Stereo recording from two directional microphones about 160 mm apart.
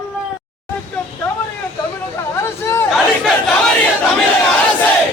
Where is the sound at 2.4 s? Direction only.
15° left (ahead or behind).